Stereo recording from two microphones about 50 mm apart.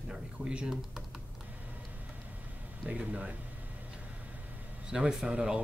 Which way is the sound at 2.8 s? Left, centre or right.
Right.